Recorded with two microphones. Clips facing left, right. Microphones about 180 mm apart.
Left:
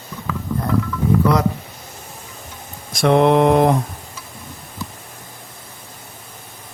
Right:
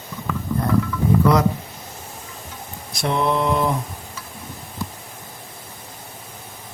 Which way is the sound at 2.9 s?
80° left.